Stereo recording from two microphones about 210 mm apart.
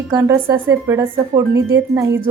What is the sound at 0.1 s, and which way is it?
A woman's voice, 15° right (ahead or behind).